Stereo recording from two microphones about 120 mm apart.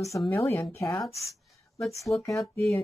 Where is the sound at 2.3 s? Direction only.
Centre (ahead or behind).